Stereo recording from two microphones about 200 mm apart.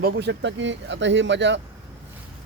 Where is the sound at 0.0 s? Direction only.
55° right (ahead or behind).